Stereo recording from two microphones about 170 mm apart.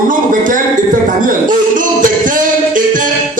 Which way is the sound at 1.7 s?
50° right (ahead or behind).